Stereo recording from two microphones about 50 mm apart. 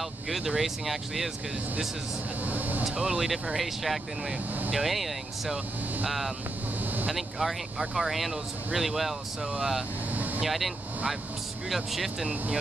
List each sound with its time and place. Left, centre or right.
0.3 s speech: centre
2.4 s speech: right
3.0 s speech: centre
10.1 s vehicle: right
10.4 s speech: centre
11.7 s speech: centre